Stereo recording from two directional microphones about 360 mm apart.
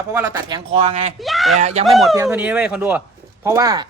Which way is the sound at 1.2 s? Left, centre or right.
Centre.